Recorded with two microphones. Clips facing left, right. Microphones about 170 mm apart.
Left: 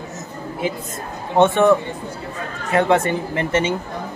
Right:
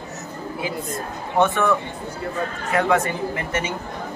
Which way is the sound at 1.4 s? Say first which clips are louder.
Left 5 dB; 25° left (ahead or behind).